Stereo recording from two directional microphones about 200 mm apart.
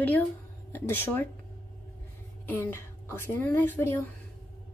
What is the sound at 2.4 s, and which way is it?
A woman's voice, 10° left (ahead or behind).